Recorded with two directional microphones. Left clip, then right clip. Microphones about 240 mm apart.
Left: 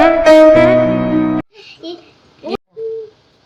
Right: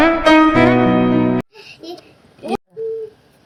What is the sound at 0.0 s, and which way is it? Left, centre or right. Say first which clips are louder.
Music: left 5 dB; centre.